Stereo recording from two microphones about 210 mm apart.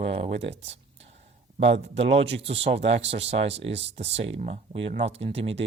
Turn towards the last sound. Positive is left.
turn(degrees=-30)  # may be behind; listen again after turning